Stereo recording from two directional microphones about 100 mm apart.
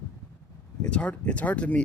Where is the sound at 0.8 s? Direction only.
10° left (ahead or behind).